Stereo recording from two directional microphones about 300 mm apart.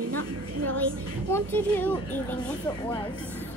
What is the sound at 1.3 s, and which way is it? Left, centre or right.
Speech, centre.